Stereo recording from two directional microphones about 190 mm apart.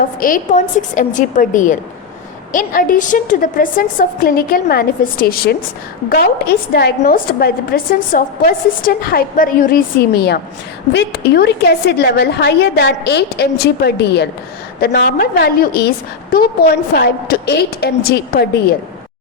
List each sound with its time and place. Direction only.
0.0 s a woman's voice: 45° left (ahead or behind)